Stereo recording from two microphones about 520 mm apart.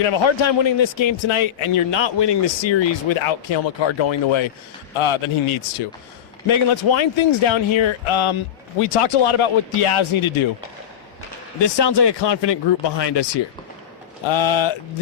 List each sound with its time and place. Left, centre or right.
0.0 s a man's voice: left
8.8 s speech: left
11.6 s speech: left
14.3 s a man's voice: left